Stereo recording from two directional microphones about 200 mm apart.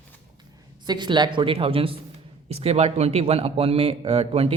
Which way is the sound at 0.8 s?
20° right (ahead or behind).